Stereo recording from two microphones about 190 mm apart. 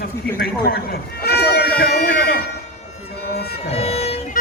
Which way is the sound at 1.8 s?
55° left (ahead or behind).